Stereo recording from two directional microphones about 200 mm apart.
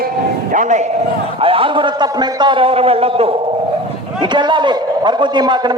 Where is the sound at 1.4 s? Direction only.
25° right (ahead or behind).